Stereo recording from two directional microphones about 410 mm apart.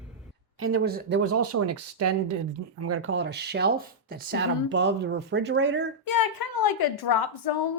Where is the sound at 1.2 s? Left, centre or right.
Right.